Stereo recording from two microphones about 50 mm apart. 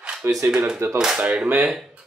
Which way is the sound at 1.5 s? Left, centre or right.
Right.